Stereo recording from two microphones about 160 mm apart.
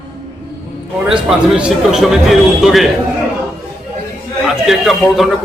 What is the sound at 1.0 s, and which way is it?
A man's voice, 5° right (ahead or behind).